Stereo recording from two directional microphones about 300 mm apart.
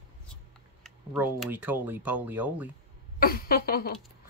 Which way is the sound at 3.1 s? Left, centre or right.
Left.